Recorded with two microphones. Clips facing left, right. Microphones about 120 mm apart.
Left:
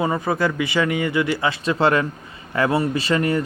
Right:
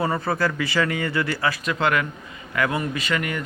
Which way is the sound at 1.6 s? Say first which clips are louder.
Left 6 dB; 30° left (ahead or behind).